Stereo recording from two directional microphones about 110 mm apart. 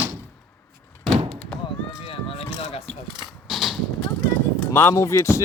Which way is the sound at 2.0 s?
60° left (ahead or behind).